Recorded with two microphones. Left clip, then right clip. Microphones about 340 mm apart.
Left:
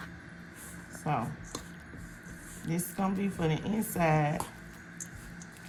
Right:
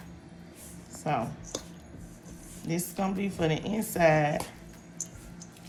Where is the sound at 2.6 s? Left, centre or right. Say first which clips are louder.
Right 2 dB; centre.